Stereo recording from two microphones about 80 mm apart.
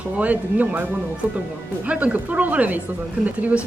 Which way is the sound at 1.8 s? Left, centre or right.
Centre.